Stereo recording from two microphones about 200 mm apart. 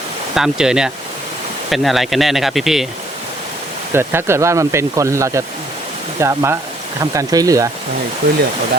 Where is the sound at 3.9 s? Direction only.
10° right (ahead or behind).